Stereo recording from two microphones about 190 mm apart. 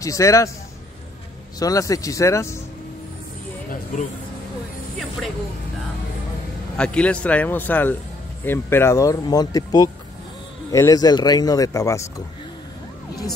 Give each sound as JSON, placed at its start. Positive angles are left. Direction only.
{"t": 0.0, "sound": "speech", "side_deg": 15}
{"t": 1.6, "sound": "speech", "side_deg": 20}
{"t": 3.9, "sound": "speech", "side_deg": 40}
{"t": 6.8, "sound": "speech", "side_deg": 5}